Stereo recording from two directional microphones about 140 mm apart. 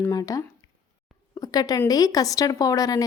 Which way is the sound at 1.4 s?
25° left (ahead or behind).